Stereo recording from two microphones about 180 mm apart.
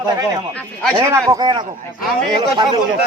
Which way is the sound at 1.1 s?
20° right (ahead or behind).